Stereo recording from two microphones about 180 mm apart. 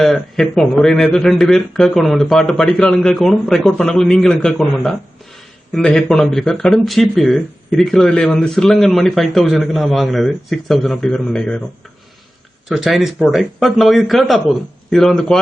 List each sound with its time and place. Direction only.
0.0 s speech: centre (ahead or behind)
12.6 s speech: centre (ahead or behind)